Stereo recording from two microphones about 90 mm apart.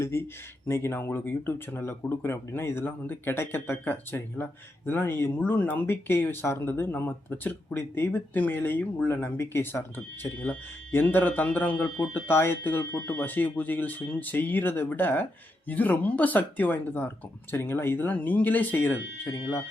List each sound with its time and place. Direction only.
0.0 s speech: 30° left (ahead or behind)